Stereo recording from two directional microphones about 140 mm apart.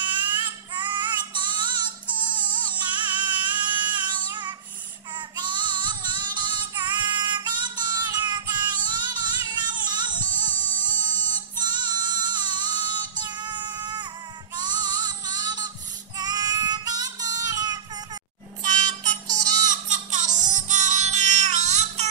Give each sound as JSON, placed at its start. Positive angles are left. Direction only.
{"t": 0.0, "sound": "child singing", "side_deg": -35}
{"t": 5.4, "sound": "female singing", "side_deg": -35}
{"t": 10.6, "sound": "a sound", "side_deg": -30}
{"t": 13.4, "sound": "child singing", "side_deg": -30}
{"t": 14.6, "sound": "music", "side_deg": -30}
{"t": 16.2, "sound": "child singing", "side_deg": -30}
{"t": 19.2, "sound": "music", "side_deg": -30}
{"t": 19.6, "sound": "music", "side_deg": -60}